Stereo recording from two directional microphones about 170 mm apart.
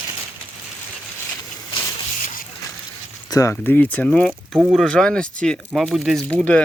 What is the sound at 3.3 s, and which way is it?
Speech, 20° left (ahead or behind).